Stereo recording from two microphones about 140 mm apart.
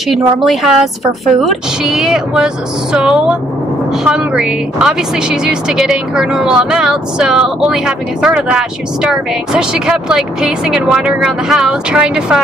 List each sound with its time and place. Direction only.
0.1 s a woman's voice: centre (ahead or behind)